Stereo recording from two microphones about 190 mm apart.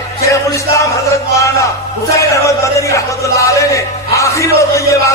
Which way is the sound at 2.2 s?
15° left (ahead or behind).